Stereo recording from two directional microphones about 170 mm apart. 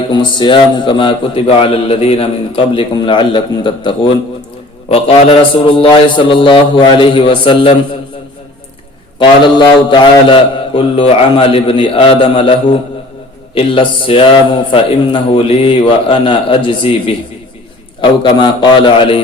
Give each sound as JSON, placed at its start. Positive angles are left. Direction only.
{"t": 0.1, "sound": "a man's voice", "side_deg": 25}
{"t": 9.1, "sound": "a man's voice", "side_deg": 30}